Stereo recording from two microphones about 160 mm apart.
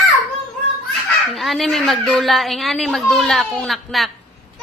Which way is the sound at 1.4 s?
Centre (ahead or behind).